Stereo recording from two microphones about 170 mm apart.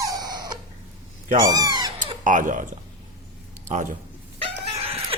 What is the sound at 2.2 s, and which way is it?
Speech, 50° right (ahead or behind).